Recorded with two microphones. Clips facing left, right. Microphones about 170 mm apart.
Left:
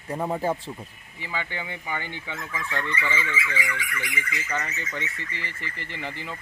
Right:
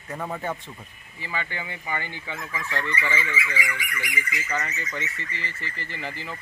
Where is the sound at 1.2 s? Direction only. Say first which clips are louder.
Even; 15° left (ahead or behind).